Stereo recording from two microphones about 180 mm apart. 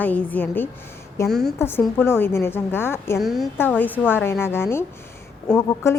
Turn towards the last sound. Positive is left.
turn(degrees=15)  # may be behind; listen again after turning